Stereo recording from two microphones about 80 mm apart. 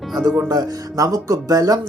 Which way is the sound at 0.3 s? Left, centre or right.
Right.